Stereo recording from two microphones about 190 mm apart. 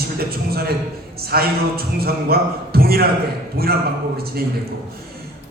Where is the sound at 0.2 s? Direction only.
55° right (ahead or behind).